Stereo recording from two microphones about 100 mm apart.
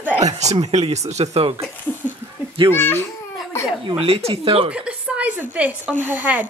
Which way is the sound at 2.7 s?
25° left (ahead or behind).